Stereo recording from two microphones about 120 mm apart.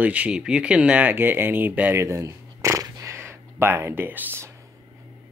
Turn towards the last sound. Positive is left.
turn(degrees=-15)  # may be behind; listen again after turning